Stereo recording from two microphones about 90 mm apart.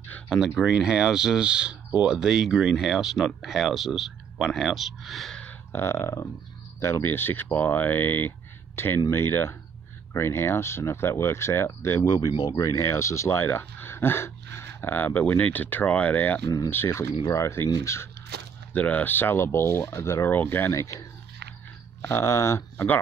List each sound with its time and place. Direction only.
0.3 s speech: centre (ahead or behind)
5.4 s burping: 20° left (ahead or behind)
6.8 s speech: 30° left (ahead or behind)
12.0 s speech: 45° left (ahead or behind); by 16.4 s 20° left (ahead or behind)
16.4 s speech: 45° left (ahead or behind)
16.7 s speech: 25° left (ahead or behind)
18.7 s speech: 15° left (ahead or behind); by 21.0 s 35° left (ahead or behind)
22.0 s speech: 30° left (ahead or behind)